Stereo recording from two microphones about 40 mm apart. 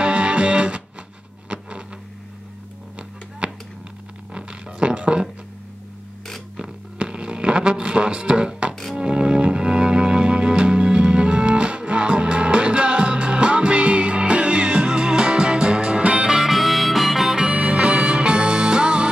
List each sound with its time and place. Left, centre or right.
0.0 s music: right
1.5 s a sound: right
3.0 s music: right
7.0 s music: right
16.3 s harmonica: centre
17.4 s music: right